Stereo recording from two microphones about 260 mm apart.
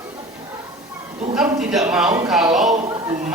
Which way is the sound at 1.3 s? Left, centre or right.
Centre.